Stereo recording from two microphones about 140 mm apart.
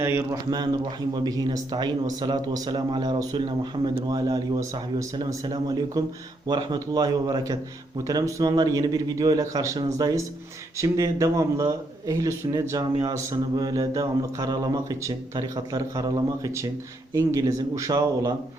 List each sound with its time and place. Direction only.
0.0 s speech: 20° right (ahead or behind)